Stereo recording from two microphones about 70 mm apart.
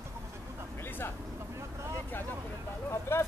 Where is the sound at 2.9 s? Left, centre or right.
Left.